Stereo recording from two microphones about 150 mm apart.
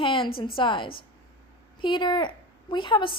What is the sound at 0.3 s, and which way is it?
A woman's voice, 35° left (ahead or behind).